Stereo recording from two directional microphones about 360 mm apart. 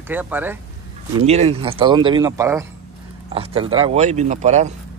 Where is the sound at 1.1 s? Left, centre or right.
Centre.